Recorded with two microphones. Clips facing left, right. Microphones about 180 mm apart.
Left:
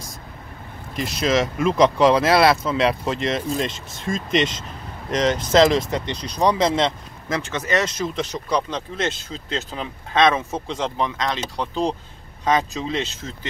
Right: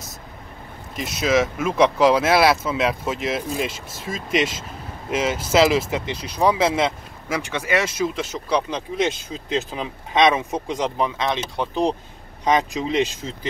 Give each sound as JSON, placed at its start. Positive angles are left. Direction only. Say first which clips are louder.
{"t": 0.9, "sound": "speech", "louder": "right 1 dB", "side_deg": 0}